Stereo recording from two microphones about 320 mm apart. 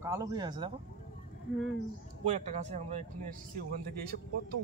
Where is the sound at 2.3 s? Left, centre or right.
Right.